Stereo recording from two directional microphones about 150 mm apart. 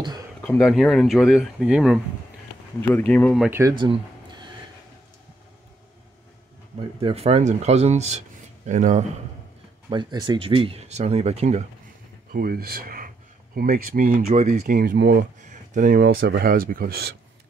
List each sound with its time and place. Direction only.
0.4 s speech: 10° left (ahead or behind)
2.9 s speech: 10° left (ahead or behind)
3.4 s speech: 15° right (ahead or behind)
3.7 s a sound: 30° right (ahead or behind)
6.8 s speech: 40° right (ahead or behind); by 9.0 s 55° right (ahead or behind)
9.8 s speech: 30° right (ahead or behind); by 11.6 s 45° right (ahead or behind)
12.4 s speech: 85° right; by 14.8 s 50° right (ahead or behind)
14.8 s speech: 75° right (ahead or behind); by 17.1 s 90° right